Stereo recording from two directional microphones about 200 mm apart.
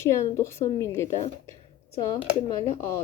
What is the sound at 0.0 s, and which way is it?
Speech, 15° left (ahead or behind).